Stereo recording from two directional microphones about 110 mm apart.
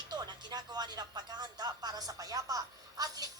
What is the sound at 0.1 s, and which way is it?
Speech, 40° right (ahead or behind).